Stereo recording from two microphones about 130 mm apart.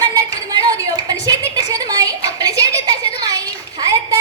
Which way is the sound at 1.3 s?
25° right (ahead or behind).